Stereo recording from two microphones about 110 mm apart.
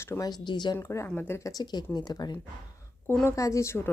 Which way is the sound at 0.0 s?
25° left (ahead or behind).